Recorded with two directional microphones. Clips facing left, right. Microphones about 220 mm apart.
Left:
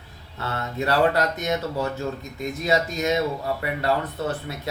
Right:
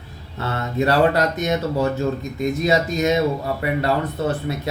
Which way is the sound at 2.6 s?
20° right (ahead or behind).